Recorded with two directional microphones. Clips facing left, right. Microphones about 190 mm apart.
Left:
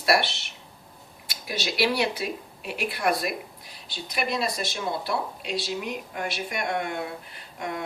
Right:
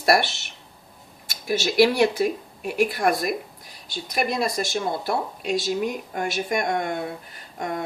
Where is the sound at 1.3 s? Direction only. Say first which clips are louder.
Right 7 dB; 45° right (ahead or behind).